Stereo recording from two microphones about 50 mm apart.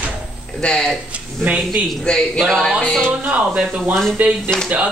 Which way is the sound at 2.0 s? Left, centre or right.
Centre.